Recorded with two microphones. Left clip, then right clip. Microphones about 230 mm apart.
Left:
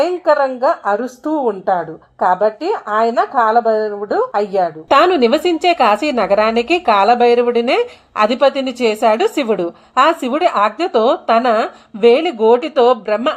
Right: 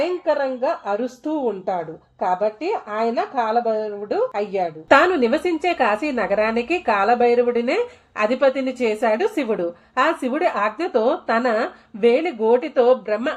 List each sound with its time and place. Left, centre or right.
0.3 s a woman's voice: left
2.1 s a woman's voice: left
4.9 s speech: left